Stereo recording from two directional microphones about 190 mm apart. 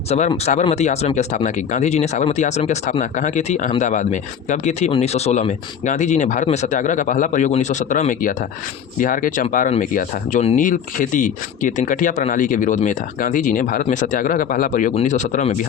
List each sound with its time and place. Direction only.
0.1 s speech: 35° left (ahead or behind)